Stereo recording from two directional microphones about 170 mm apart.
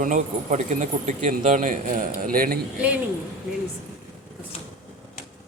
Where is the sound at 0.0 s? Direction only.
50° right (ahead or behind).